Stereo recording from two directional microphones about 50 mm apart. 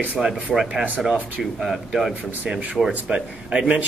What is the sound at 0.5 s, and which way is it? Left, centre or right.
Speech, centre.